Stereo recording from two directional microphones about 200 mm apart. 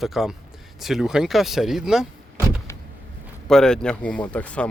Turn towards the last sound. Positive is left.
turn(degrees=5)  # may be behind; listen again after turning